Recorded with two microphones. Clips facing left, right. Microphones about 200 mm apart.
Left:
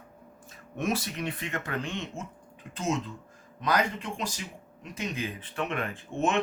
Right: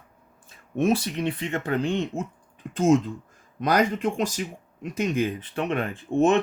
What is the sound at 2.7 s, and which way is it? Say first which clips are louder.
Speech: right 11 dB; 45° right (ahead or behind).